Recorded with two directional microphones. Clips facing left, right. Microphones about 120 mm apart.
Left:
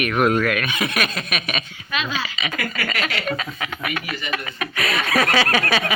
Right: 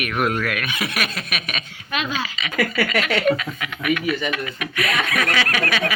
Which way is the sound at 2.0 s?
50° right (ahead or behind).